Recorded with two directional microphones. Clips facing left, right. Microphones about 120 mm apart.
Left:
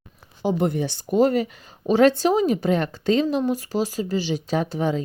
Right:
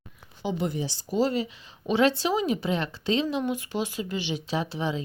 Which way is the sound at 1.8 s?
45° left (ahead or behind).